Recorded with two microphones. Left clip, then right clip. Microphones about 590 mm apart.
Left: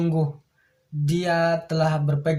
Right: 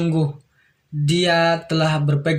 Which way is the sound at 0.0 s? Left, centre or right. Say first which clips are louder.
Right 3 dB; left.